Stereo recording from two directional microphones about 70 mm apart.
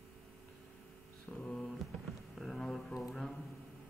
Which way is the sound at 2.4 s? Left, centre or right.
Centre.